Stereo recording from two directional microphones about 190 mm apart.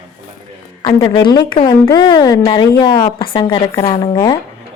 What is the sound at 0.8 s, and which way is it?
Speech, 20° left (ahead or behind).